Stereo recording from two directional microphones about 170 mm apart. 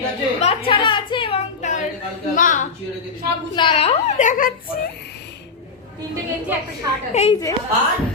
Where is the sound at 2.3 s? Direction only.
50° left (ahead or behind).